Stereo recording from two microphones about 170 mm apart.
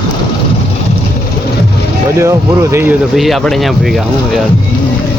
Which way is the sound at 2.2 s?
15° right (ahead or behind).